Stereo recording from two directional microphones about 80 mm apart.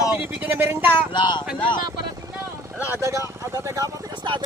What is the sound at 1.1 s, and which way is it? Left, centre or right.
Speech, left.